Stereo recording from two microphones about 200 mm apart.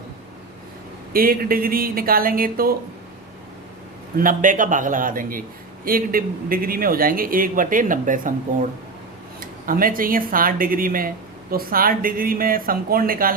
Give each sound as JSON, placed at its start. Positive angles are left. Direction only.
{"t": 1.1, "sound": "a man's voice", "side_deg": -45}
{"t": 4.2, "sound": "a man's voice", "side_deg": -40}
{"t": 9.4, "sound": "a man's voice", "side_deg": -45}